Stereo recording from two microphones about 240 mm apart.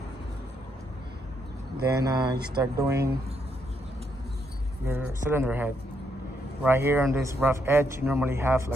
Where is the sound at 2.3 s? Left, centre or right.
Right.